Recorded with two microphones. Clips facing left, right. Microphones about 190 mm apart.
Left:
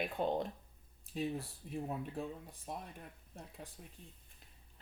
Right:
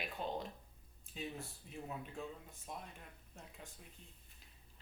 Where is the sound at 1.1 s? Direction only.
35° left (ahead or behind).